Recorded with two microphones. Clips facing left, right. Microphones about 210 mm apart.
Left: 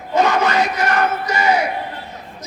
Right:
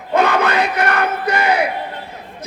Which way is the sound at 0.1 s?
60° right (ahead or behind).